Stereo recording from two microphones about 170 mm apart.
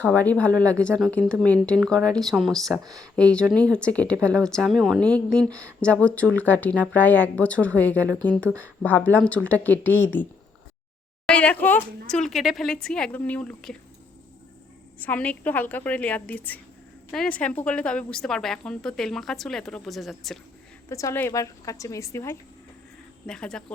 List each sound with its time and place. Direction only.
0.0 s a woman's voice: 10° left (ahead or behind)
11.3 s a woman's voice: 5° left (ahead or behind)
14.9 s a woman's voice: 10° left (ahead or behind)
20.9 s a woman's voice: 15° left (ahead or behind)
23.2 s a woman's voice: 5° left (ahead or behind)